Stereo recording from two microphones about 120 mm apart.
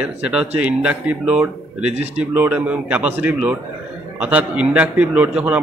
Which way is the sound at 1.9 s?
65° right (ahead or behind).